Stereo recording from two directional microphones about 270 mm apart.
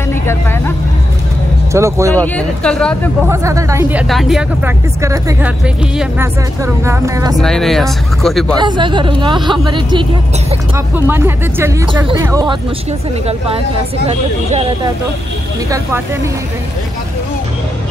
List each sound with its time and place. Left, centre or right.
0.1 s speech: centre
1.7 s speech: centre
2.1 s speech: centre
3.3 s speech: centre
4.1 s speech: centre
7.4 s speech: centre
8.5 s speech: centre
11.1 s speech: centre
14.0 s speech: right